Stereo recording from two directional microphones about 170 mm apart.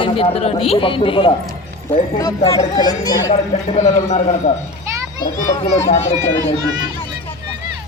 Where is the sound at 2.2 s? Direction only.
20° left (ahead or behind).